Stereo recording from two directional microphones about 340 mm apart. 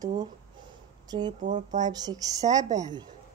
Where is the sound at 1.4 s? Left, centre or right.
Right.